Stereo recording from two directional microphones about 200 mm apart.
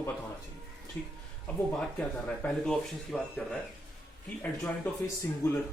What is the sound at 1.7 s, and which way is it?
Speech, 5° left (ahead or behind).